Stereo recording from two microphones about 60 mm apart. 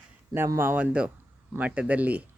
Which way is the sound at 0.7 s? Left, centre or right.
Right.